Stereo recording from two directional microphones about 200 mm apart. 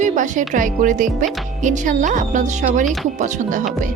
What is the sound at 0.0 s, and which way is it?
Speech, 40° right (ahead or behind).